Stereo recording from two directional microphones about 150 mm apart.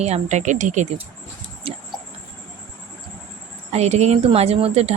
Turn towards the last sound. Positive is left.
turn(degrees=-45)  # may be behind; listen again after turning